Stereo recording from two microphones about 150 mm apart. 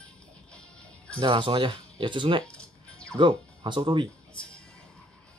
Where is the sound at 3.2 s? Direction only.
30° right (ahead or behind).